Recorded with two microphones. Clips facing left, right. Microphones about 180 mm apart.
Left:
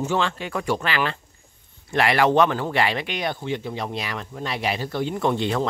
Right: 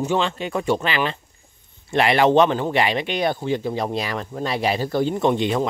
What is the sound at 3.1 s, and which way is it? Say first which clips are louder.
Speech: right 5 dB; 35° right (ahead or behind).